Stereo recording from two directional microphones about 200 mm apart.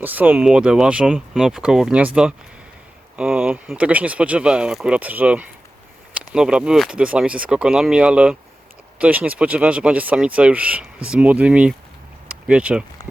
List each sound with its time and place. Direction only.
0.0 s speech: 10° right (ahead or behind)